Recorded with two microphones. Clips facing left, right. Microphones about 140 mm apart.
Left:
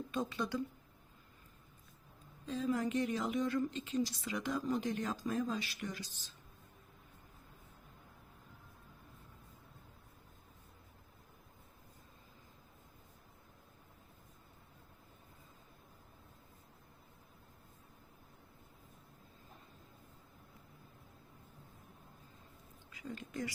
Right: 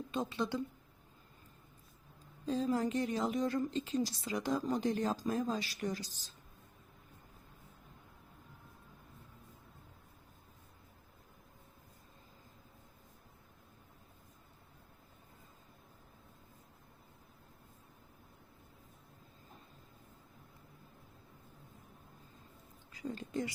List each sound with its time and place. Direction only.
0.1 s a woman's voice: 25° right (ahead or behind)
2.5 s speech: 35° right (ahead or behind)
22.9 s a sound: 35° right (ahead or behind)